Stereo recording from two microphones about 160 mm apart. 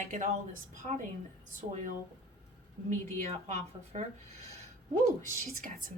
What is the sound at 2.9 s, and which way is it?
Speech, 45° right (ahead or behind).